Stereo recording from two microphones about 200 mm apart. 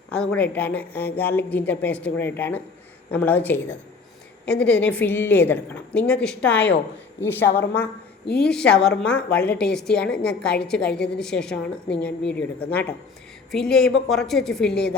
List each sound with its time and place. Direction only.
0.1 s a woman's voice: 5° left (ahead or behind)
7.4 s a woman's voice: 55° left (ahead or behind)
8.4 s a woman's voice: 5° left (ahead or behind)